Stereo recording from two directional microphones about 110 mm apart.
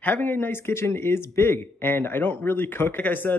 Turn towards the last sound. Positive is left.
turn(degrees=15)  # may be behind; listen again after turning